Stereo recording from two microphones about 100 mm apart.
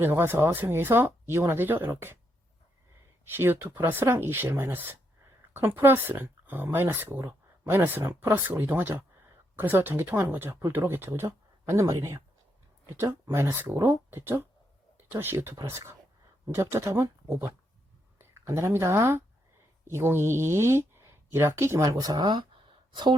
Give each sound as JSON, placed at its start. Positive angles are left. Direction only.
{"t": 0.0, "sound": "speech", "side_deg": -25}
{"t": 3.2, "sound": "speech", "side_deg": -20}
{"t": 13.3, "sound": "speech", "side_deg": -25}